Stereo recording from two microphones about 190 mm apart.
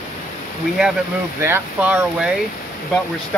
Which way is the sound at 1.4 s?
10° right (ahead or behind).